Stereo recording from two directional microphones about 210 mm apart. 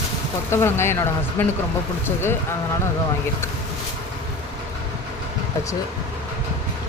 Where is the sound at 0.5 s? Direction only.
10° left (ahead or behind).